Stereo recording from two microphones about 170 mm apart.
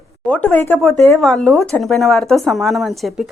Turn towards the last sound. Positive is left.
turn(degrees=0)  # may be behind; listen again after turning